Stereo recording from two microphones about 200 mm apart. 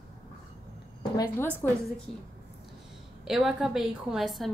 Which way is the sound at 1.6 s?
10° left (ahead or behind).